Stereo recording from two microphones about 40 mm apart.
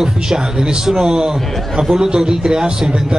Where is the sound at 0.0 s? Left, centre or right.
Centre.